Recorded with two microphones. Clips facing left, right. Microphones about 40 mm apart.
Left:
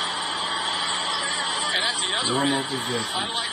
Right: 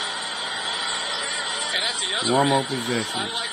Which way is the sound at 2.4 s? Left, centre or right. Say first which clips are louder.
Right 5 dB; right.